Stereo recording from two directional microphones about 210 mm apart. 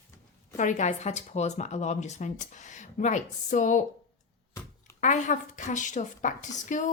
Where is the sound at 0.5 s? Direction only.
35° left (ahead or behind).